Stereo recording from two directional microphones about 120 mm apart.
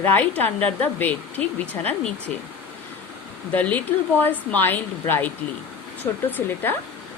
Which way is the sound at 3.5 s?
15° left (ahead or behind).